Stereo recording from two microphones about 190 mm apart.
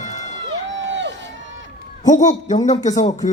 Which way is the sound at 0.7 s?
70° right (ahead or behind).